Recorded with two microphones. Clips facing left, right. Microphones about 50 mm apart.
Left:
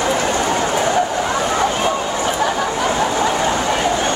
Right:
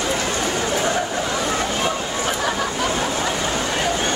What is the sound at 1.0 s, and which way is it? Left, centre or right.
Vehicle, left.